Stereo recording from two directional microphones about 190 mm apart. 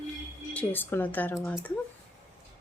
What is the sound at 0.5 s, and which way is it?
Speech, 10° left (ahead or behind).